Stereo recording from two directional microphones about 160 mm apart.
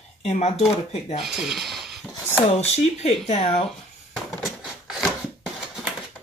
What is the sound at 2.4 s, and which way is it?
Speech, 40° left (ahead or behind).